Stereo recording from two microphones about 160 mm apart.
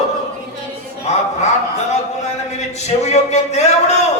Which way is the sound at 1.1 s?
45° left (ahead or behind).